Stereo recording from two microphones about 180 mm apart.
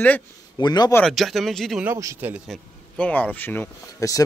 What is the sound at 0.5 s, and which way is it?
Speech, 25° left (ahead or behind).